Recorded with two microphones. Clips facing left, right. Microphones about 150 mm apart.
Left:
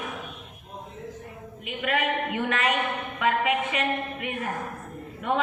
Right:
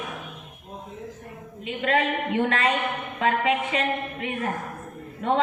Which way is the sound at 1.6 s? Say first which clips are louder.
Right 3 dB; 30° right (ahead or behind).